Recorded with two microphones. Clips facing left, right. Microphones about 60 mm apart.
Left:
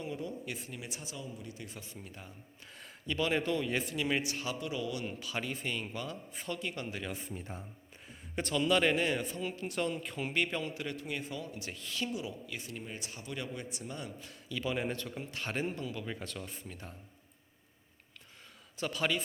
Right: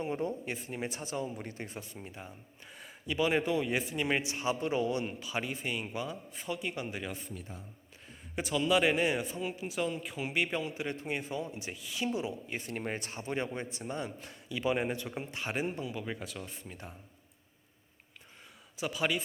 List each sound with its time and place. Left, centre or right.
0.0 s speech: right
2.1 s a man's voice: centre
4.6 s speech: right
5.2 s a man's voice: centre
7.3 s speech: left
8.4 s a man's voice: centre
10.8 s speech: right
11.8 s a man's voice: centre
12.0 s speech: right
12.7 s a man's voice: right; by 16.7 s centre
18.8 s a man's voice: centre